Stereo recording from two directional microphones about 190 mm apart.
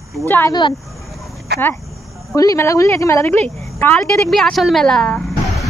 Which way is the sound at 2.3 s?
15° left (ahead or behind).